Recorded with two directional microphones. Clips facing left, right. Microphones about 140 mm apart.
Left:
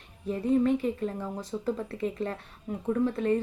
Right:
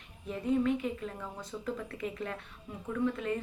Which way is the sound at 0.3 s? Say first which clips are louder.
Left 5 dB; 35° left (ahead or behind).